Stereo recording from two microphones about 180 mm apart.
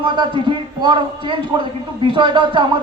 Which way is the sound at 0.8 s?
25° right (ahead or behind).